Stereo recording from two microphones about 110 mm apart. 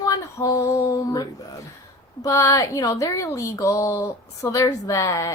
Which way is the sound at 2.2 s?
30° left (ahead or behind).